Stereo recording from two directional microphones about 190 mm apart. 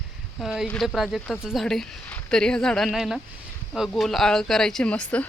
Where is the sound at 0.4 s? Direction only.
Centre (ahead or behind).